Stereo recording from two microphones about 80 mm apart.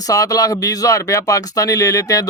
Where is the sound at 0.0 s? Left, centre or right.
Left.